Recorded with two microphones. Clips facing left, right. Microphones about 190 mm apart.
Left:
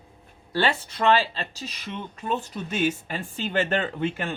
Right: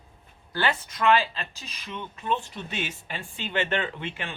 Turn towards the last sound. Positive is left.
turn(degrees=45)  # may be behind; listen again after turning